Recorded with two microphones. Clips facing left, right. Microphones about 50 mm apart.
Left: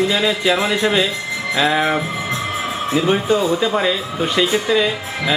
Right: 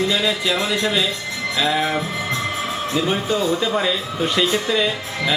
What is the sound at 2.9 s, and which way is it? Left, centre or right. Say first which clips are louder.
Speech: left 5 dB; centre.